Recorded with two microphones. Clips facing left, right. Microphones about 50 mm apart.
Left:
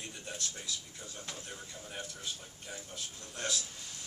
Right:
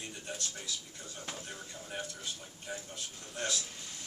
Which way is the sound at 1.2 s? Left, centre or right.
Centre.